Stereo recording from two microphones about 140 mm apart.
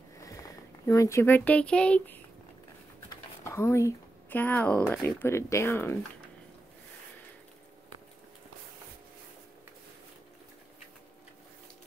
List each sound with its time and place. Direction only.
0.2 s speech: 25° left (ahead or behind)
3.4 s speech: 20° left (ahead or behind)